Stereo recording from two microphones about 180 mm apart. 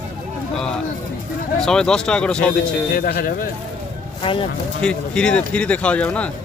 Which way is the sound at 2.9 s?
55° left (ahead or behind).